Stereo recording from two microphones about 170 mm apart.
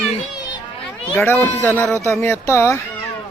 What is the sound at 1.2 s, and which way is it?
Music, 10° left (ahead or behind).